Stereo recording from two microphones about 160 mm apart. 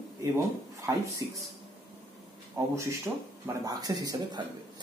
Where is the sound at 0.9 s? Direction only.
20° right (ahead or behind).